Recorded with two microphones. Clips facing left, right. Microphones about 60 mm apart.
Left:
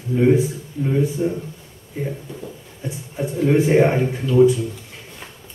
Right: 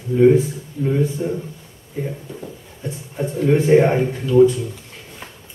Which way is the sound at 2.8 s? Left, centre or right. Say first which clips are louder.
Right 1 dB; centre.